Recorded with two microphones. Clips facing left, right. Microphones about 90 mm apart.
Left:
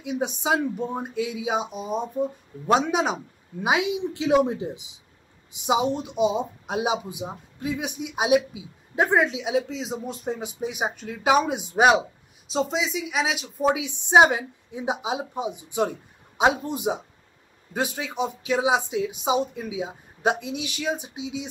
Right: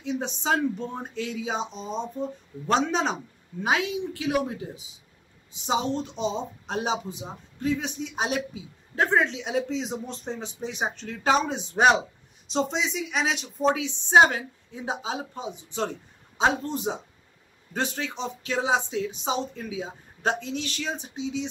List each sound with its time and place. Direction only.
0.0 s a woman's voice: 10° left (ahead or behind)